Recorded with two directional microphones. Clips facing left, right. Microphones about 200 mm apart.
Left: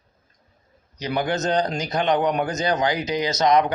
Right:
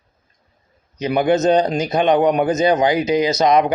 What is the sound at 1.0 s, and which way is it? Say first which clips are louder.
A man's voice: right 8 dB; 20° right (ahead or behind).